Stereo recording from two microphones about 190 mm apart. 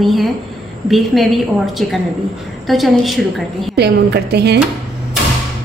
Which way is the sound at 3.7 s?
60° right (ahead or behind).